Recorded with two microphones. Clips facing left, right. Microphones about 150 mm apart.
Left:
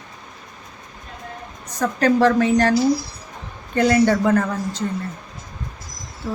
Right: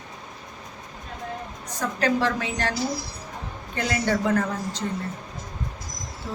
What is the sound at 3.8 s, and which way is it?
Speech, 50° left (ahead or behind).